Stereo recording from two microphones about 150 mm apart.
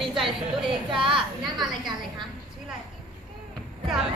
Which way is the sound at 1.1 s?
30° right (ahead or behind).